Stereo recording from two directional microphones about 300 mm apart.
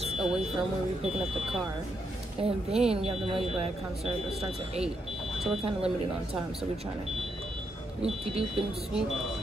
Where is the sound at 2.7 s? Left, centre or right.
Centre.